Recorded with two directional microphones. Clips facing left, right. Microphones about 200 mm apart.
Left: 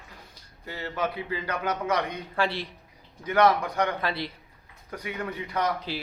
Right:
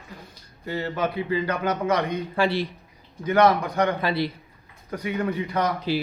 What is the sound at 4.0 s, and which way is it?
Speech, 5° right (ahead or behind).